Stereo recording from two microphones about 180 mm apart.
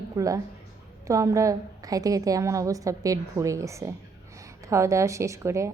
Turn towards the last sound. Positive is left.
turn(degrees=-15)  # may be behind; listen again after turning